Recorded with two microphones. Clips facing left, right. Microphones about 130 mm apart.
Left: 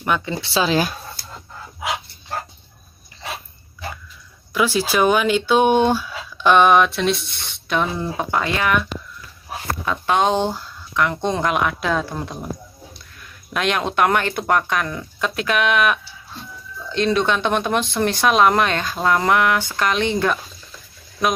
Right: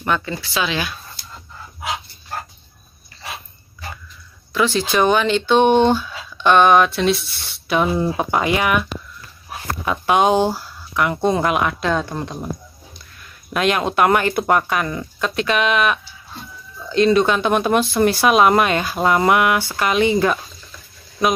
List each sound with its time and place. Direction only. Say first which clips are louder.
0.0 s speech: even; 10° left (ahead or behind)
0.4 s speech: left 4 dB; 30° left (ahead or behind)
4.6 s speech: right 1 dB; 10° left (ahead or behind); by 8.8 s 15° right (ahead or behind)
9.8 s speech: right 3 dB; 10° right (ahead or behind)
13.5 s speech: right 3 dB; centre (ahead or behind)